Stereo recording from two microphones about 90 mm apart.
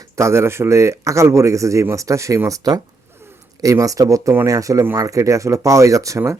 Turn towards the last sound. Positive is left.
turn(degrees=-35)  # may be behind; listen again after turning